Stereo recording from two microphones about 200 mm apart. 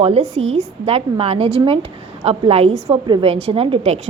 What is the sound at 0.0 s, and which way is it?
A woman's voice, 30° right (ahead or behind).